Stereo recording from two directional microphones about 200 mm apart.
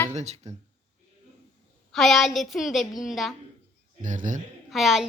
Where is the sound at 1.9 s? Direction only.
Centre (ahead or behind).